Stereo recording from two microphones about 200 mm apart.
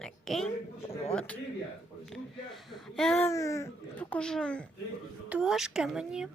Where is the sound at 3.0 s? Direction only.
5° left (ahead or behind).